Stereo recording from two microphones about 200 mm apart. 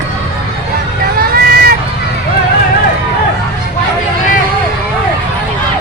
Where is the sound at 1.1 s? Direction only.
50° right (ahead or behind).